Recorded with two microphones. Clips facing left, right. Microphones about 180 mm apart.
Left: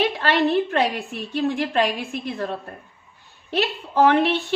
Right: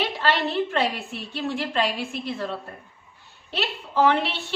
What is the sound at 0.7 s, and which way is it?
A woman's voice, 50° left (ahead or behind).